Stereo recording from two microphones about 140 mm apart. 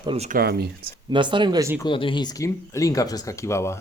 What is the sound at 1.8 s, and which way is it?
Speech, 35° left (ahead or behind).